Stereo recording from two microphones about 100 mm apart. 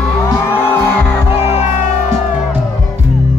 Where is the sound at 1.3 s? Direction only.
90° left.